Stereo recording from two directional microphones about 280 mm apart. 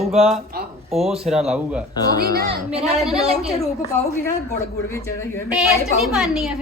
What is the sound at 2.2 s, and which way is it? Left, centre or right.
Speech, right.